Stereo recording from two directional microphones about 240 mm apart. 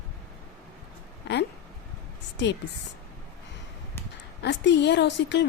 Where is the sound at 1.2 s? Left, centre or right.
Left.